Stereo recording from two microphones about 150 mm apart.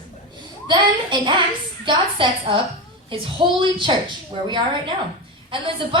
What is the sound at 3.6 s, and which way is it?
Speech, 30° right (ahead or behind).